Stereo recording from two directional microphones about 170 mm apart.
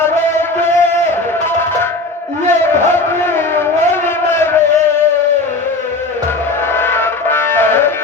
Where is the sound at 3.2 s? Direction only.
15° left (ahead or behind).